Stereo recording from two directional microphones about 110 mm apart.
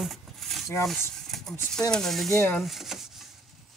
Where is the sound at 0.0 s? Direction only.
Centre (ahead or behind).